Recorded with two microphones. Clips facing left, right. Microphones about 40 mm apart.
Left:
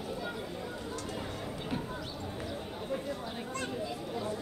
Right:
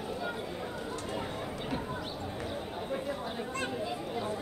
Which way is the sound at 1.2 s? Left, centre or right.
Centre.